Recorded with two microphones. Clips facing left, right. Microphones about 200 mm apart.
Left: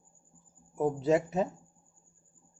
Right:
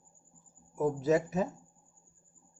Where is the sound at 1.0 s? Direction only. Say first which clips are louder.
Left 2 dB; 30° left (ahead or behind).